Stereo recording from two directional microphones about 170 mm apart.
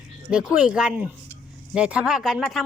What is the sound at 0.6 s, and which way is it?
A woman's voice, 5° right (ahead or behind).